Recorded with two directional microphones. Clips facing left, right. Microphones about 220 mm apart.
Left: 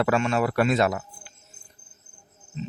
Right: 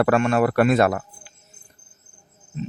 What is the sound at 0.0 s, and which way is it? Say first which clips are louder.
A man's voice: right 4 dB; 55° right (ahead or behind).